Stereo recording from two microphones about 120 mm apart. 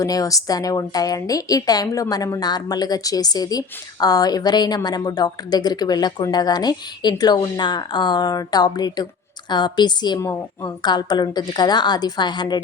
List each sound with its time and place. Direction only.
0.0 s a woman's voice: 30° left (ahead or behind)